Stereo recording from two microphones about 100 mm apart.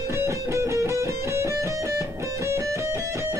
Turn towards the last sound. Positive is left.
turn(degrees=-30)  # may be behind; listen again after turning